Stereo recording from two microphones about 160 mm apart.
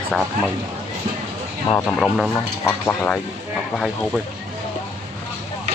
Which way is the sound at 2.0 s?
Centre (ahead or behind).